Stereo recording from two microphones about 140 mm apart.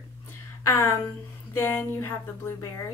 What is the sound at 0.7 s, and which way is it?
A woman's voice, 20° left (ahead or behind).